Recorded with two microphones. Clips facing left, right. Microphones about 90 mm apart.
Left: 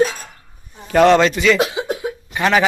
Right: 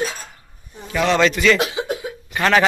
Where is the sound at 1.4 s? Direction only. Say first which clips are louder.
Left 1 dB; 10° left (ahead or behind).